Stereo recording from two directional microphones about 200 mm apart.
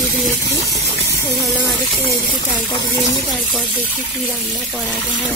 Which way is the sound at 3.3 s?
Centre (ahead or behind).